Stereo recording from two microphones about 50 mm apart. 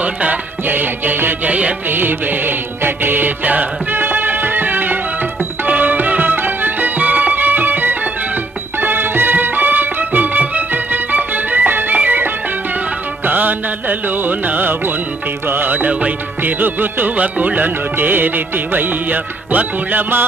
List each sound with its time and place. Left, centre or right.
0.0 s music: right
1.5 s music: right
1.9 s music: right
16.4 s music: right